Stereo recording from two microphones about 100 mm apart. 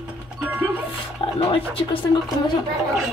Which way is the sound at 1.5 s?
60° left (ahead or behind).